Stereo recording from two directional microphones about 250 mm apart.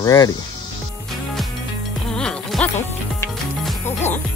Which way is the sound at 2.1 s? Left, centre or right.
Centre.